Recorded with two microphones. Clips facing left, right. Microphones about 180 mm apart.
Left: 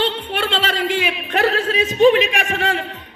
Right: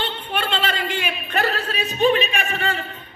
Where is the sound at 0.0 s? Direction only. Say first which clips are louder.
Left 5 dB; 90° left.